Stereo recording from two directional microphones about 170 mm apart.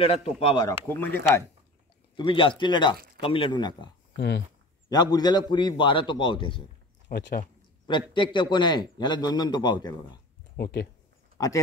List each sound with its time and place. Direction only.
0.0 s speech: 35° left (ahead or behind)
0.7 s speech: 10° left (ahead or behind)
2.1 s a man's voice: 30° left (ahead or behind)
4.8 s a man's voice: 25° left (ahead or behind)
7.1 s speech: 75° left (ahead or behind)
7.8 s a man's voice: 30° left (ahead or behind)
10.6 s speech: 80° left
11.3 s speech: 20° left (ahead or behind)